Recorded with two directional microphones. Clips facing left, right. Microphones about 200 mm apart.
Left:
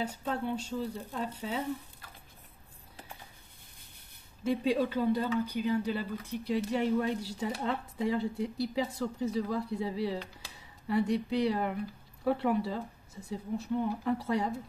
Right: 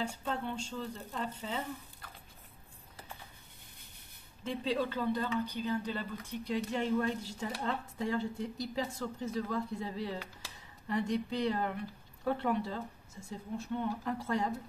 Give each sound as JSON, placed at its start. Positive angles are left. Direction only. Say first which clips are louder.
{"t": 0.0, "sound": "speech", "louder": "left 3 dB", "side_deg": 10}
{"t": 4.5, "sound": "speech", "louder": "left 5 dB", "side_deg": 10}